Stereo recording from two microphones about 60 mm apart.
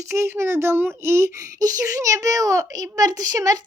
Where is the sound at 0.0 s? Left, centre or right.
Right.